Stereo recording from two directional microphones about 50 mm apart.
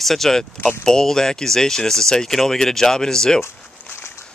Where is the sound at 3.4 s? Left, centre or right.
Left.